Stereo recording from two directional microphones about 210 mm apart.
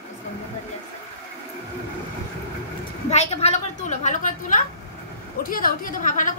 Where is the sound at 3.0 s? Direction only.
30° left (ahead or behind).